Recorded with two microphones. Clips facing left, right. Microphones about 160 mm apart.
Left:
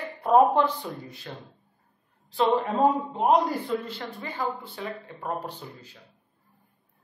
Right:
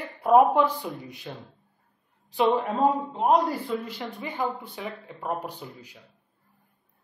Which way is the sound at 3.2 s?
Centre (ahead or behind).